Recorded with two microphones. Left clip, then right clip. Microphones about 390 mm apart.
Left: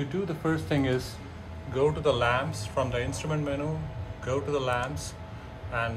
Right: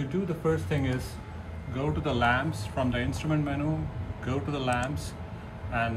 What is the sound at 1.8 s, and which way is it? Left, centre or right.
A man's voice, centre.